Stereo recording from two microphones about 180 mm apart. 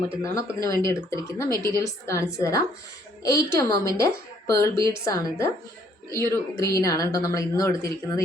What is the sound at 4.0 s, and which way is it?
Speech, 15° left (ahead or behind).